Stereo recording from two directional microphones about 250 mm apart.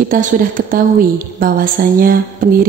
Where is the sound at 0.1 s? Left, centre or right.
Right.